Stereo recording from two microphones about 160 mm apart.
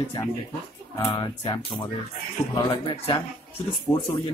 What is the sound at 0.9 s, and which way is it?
A man's voice, 25° left (ahead or behind).